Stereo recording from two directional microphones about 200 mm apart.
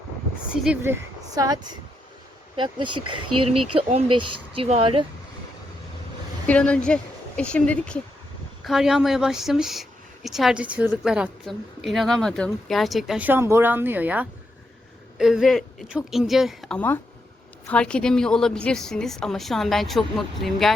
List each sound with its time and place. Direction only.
0.4 s a woman's voice: 5° right (ahead or behind); by 2.9 s 25° right (ahead or behind)
2.9 s speech: 90° right
3.5 s speech: 30° right (ahead or behind)
6.5 s a woman's voice: 5° left (ahead or behind)